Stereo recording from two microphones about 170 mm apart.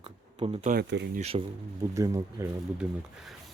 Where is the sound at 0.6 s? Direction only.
55° right (ahead or behind).